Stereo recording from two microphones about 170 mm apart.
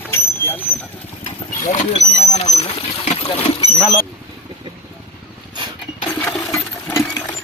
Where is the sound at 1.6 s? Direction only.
40° left (ahead or behind).